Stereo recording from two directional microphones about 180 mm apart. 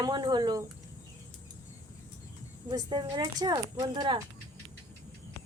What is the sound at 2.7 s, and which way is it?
A woman's voice, 20° right (ahead or behind).